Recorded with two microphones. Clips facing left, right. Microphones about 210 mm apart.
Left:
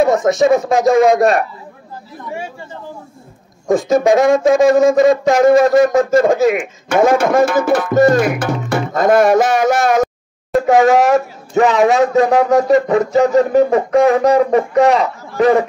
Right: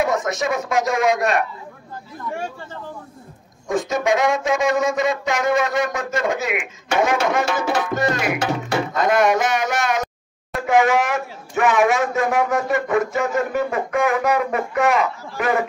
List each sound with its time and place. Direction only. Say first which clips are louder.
0.0 s speech: left 9 dB; 30° left (ahead or behind)
3.7 s speech: left 8 dB; 35° left (ahead or behind)